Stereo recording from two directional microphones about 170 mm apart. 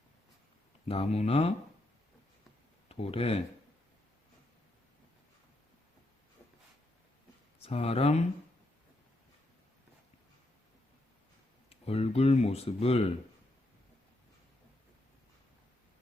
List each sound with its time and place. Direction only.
0.9 s speech: 35° left (ahead or behind)
2.9 s speech: 35° left (ahead or behind)
7.6 s speech: 35° left (ahead or behind)
11.7 s speech: 35° left (ahead or behind)